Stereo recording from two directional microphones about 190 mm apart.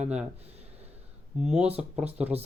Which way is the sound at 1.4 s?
5° right (ahead or behind).